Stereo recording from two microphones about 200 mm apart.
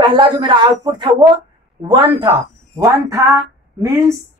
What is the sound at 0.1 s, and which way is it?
Speech, 20° right (ahead or behind).